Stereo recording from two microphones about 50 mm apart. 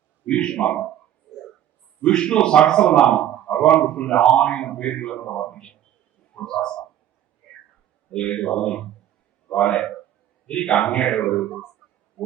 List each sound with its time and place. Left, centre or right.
0.3 s a man's voice: centre
2.1 s speech: centre
3.0 s a man's voice: left
8.1 s a man's voice: centre